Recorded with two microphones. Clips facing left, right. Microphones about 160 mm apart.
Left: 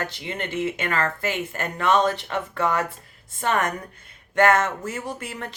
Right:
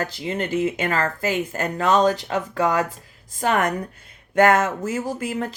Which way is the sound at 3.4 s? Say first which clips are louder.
Right 3 dB; 40° right (ahead or behind).